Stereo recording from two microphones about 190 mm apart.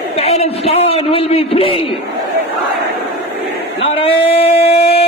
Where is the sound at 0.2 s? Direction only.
35° left (ahead or behind).